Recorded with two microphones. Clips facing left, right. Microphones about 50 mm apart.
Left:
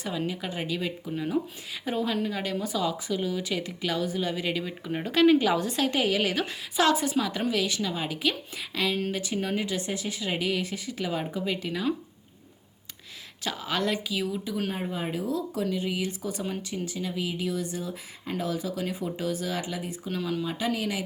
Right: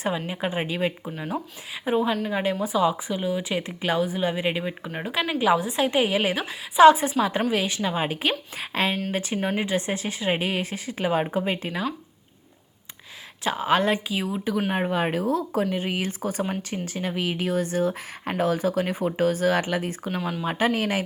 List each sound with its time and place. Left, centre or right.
0.3 s speech: right
1.1 s speech: centre
4.9 s a woman's voice: centre
6.4 s a woman's voice: centre
6.8 s speech: right
13.4 s speech: right
14.7 s speech: right
15.3 s speech: right